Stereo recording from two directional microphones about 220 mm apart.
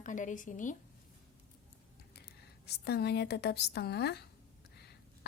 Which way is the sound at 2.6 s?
50° left (ahead or behind).